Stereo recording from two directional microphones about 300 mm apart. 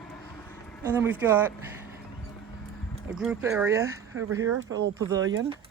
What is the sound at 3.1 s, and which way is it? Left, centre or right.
Speech, centre.